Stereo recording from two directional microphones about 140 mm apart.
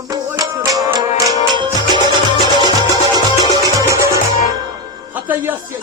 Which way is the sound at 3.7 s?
20° right (ahead or behind).